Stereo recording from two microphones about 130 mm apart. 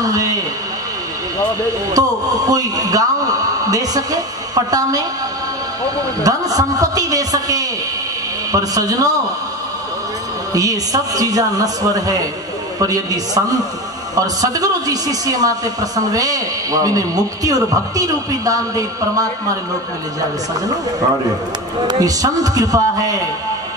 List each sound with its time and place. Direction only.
0.0 s a man's voice: 25° right (ahead or behind)
2.0 s a man's voice: 30° right (ahead or behind)
6.2 s a man's voice: 30° right (ahead or behind)
10.5 s a man's voice: 25° right (ahead or behind)
21.8 s a man's voice: 30° right (ahead or behind)